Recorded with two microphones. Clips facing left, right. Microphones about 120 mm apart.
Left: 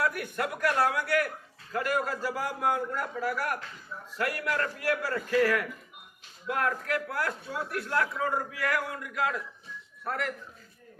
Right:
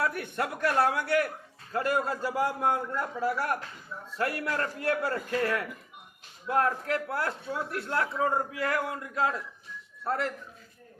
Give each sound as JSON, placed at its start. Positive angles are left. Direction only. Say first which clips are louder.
{"t": 0.0, "sound": "a man's voice", "louder": "even", "side_deg": -25}